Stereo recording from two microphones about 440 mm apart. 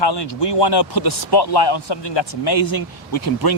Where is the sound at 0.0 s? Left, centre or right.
Left.